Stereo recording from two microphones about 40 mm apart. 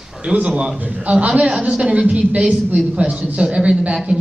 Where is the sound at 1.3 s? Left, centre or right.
Right.